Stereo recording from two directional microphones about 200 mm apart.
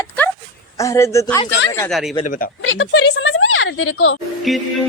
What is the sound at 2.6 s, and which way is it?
Speech, 80° left.